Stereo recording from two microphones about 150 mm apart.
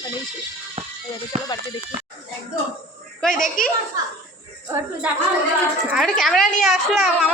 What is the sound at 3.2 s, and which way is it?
Speech, 5° left (ahead or behind).